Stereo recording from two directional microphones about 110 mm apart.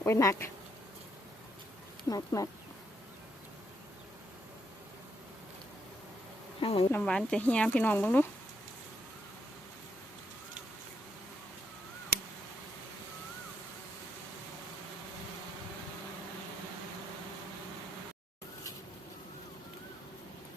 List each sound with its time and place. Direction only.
0.0 s speech: 25° left (ahead or behind)
2.0 s speech: 35° left (ahead or behind)
6.6 s insect: 55° left (ahead or behind)
7.0 s speech: 5° left (ahead or behind)